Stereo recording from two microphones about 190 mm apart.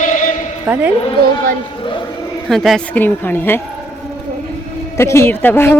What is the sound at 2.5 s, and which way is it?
Speech, centre (ahead or behind).